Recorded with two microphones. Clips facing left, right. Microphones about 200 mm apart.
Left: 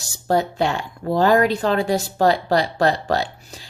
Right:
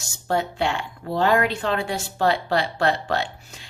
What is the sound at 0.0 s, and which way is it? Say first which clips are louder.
A woman's voice: left 4 dB; 35° left (ahead or behind).